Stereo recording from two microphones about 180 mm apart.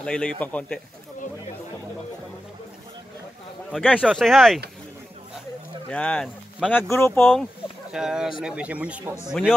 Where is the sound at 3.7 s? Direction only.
5° left (ahead or behind).